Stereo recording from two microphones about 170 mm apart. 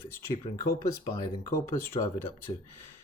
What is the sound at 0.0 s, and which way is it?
Speech, 15° left (ahead or behind).